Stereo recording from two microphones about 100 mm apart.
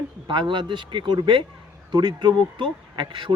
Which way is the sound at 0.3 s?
50° right (ahead or behind).